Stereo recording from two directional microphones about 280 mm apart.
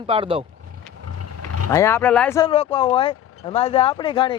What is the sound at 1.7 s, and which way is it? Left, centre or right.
Speech, centre.